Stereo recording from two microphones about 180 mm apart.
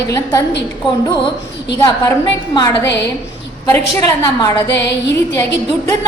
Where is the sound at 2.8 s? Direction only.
70° left (ahead or behind).